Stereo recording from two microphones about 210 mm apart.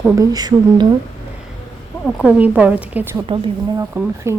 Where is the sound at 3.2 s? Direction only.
25° right (ahead or behind).